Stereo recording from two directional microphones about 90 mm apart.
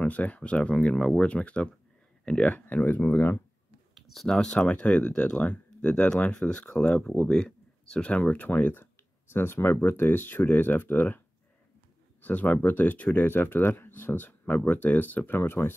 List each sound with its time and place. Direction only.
0.0 s speech: 15° left (ahead or behind)
3.9 s speech: centre (ahead or behind); by 15.7 s 25° left (ahead or behind)